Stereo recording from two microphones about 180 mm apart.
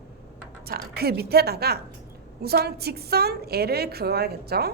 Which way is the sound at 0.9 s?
60° right (ahead or behind).